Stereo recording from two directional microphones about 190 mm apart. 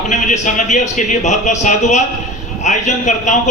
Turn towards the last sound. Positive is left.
turn(degrees=40)  # may be behind; listen again after turning